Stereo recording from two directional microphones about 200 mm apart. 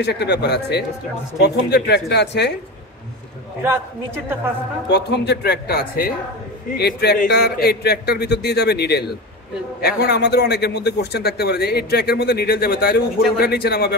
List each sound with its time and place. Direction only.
0.0 s speech: 55° left (ahead or behind)
3.6 s a man's voice: 10° right (ahead or behind)
4.8 s a man's voice: 55° left (ahead or behind)